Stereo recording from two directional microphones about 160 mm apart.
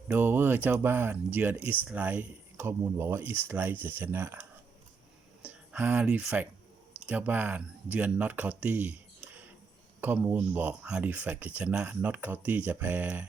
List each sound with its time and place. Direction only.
0.1 s speech: 10° right (ahead or behind)